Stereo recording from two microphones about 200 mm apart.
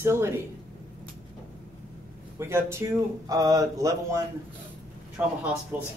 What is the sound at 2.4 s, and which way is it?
Speech, 15° right (ahead or behind).